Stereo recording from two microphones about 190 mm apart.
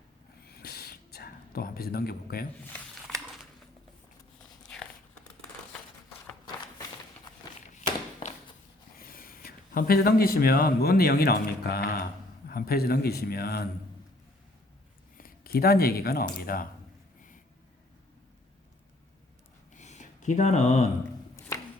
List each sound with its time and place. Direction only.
0.4 s whispering: 55° left (ahead or behind)
9.0 s a man's voice: 50° left (ahead or behind)
15.2 s speech: 55° left (ahead or behind)
19.7 s a sound: 40° left (ahead or behind)